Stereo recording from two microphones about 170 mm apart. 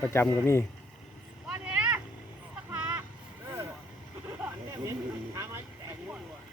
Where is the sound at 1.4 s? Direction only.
5° right (ahead or behind).